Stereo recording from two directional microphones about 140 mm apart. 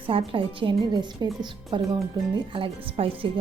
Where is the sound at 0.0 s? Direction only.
40° right (ahead or behind).